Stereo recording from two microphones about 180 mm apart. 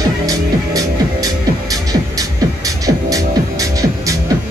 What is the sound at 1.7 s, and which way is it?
Music, 20° right (ahead or behind).